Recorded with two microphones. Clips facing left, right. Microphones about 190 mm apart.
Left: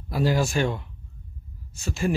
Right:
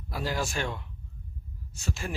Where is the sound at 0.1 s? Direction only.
5° left (ahead or behind).